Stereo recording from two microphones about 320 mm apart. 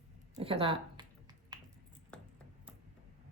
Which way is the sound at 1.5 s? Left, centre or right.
Centre.